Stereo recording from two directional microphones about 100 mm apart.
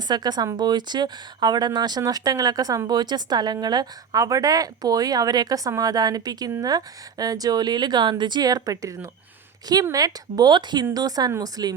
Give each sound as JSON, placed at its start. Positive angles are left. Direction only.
{"t": 0.1, "sound": "speech", "side_deg": -45}